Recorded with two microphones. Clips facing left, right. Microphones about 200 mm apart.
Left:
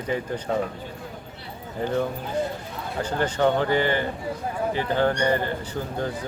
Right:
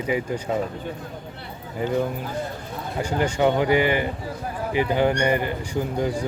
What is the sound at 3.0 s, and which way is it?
Speech, 10° right (ahead or behind).